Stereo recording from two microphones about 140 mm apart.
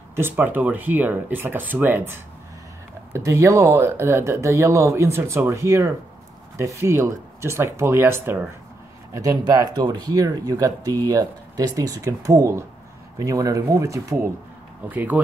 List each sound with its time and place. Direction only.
0.1 s speech: 15° right (ahead or behind)